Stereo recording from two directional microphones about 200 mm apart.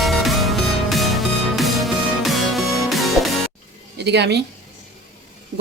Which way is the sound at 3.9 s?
60° right (ahead or behind).